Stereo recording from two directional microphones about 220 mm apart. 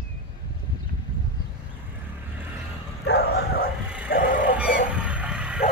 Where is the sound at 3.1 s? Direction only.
45° left (ahead or behind).